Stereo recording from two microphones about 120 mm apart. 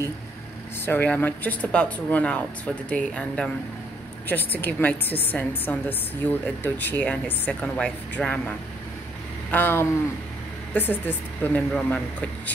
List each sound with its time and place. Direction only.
0.8 s a woman's voice: 15° left (ahead or behind)